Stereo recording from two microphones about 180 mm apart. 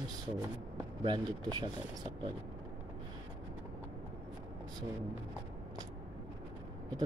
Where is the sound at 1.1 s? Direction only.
25° right (ahead or behind).